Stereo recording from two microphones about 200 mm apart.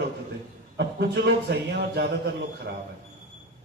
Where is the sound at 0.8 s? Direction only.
55° right (ahead or behind).